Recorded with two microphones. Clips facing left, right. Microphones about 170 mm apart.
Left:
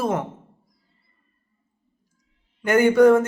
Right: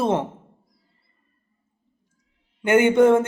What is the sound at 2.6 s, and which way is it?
Speech, 25° right (ahead or behind).